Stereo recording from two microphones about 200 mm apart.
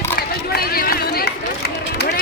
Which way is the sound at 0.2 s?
50° left (ahead or behind).